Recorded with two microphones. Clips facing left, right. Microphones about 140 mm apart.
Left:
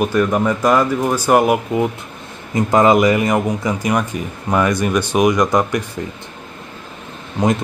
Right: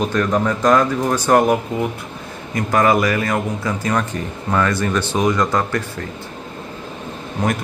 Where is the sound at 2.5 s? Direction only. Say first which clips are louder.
Left 4 dB; 20° left (ahead or behind).